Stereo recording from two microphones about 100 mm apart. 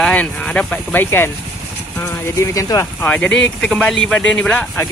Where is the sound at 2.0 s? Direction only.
30° left (ahead or behind).